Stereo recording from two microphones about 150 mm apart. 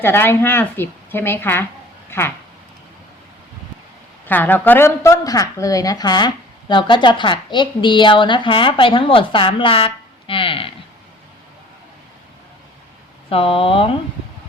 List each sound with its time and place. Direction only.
0.0 s a woman's voice: 15° left (ahead or behind)
4.3 s a woman's voice: 10° left (ahead or behind); by 10.7 s 35° left (ahead or behind)
13.3 s a woman's voice: 40° left (ahead or behind)